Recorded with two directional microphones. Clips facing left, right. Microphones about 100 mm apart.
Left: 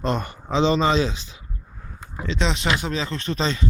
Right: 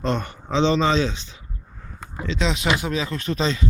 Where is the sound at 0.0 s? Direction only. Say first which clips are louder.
Even; 5° left (ahead or behind).